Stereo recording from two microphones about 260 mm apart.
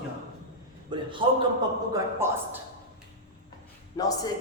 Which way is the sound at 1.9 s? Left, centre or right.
Centre.